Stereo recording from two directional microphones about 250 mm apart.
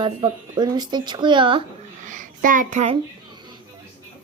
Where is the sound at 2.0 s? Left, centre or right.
Right.